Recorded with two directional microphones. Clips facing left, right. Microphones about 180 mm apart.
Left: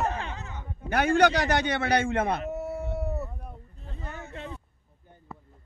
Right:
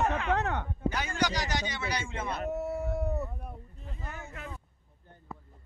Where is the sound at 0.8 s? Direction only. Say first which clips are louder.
Left 10 dB; 60° left (ahead or behind).